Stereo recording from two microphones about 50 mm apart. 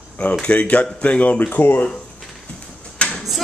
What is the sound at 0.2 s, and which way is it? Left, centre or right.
Speech, left.